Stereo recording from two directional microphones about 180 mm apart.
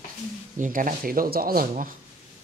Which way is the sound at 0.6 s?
45° right (ahead or behind).